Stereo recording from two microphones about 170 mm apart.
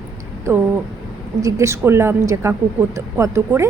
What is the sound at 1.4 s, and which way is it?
A woman's voice, 20° right (ahead or behind).